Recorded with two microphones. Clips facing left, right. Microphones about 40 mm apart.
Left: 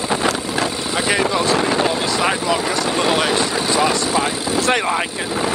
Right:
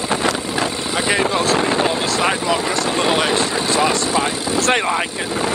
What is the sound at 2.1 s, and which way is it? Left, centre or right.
Vehicle, centre.